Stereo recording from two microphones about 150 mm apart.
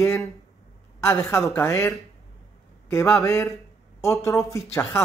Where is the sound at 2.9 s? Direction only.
15° left (ahead or behind).